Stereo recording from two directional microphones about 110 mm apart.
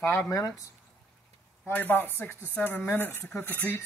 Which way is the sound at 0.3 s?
30° left (ahead or behind).